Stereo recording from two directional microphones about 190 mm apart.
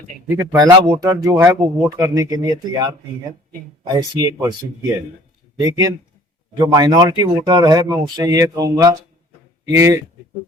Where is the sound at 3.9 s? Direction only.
20° right (ahead or behind).